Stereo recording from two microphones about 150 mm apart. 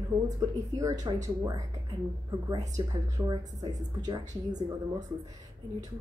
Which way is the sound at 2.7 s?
25° right (ahead or behind).